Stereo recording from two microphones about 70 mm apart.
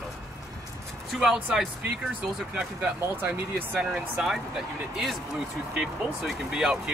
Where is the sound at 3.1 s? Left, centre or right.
Right.